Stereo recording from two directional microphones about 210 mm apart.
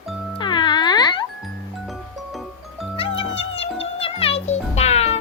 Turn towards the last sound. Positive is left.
turn(degrees=30)  # may be behind; listen again after turning